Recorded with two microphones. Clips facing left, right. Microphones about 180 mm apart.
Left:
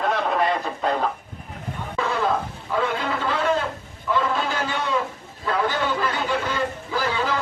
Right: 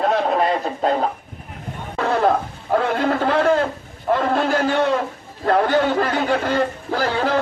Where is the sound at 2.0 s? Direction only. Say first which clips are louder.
Right 5 dB; 60° right (ahead or behind).